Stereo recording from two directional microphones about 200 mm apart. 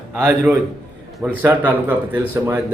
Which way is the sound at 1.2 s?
10° right (ahead or behind).